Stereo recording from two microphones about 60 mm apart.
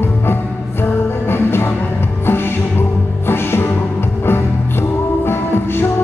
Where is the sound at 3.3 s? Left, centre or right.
Left.